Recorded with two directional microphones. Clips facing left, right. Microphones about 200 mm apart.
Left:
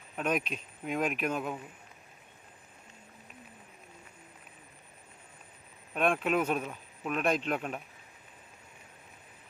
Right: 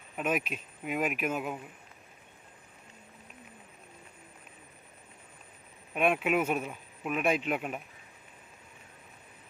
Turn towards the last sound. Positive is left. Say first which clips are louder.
# right 1 dB
turn(degrees=-10)  # may be behind; listen again after turning